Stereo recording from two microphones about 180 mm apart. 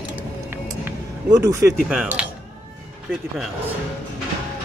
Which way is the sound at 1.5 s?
15° right (ahead or behind).